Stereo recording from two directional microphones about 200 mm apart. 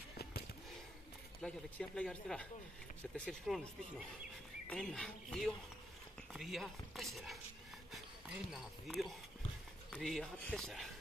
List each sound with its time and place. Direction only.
0.2 s a sound: 50° left (ahead or behind)
1.4 s speech: 5° left (ahead or behind)
4.6 s speech: 5° left (ahead or behind)
8.5 s speech: centre (ahead or behind)